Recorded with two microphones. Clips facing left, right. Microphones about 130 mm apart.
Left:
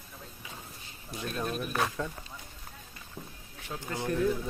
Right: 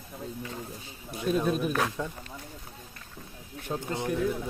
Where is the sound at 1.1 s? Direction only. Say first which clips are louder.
Right 7 dB; 10° right (ahead or behind).